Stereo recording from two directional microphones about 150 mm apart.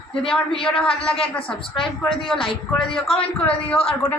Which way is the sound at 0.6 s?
5° left (ahead or behind).